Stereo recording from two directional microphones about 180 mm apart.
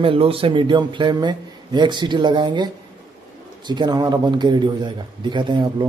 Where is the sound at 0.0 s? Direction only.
30° right (ahead or behind).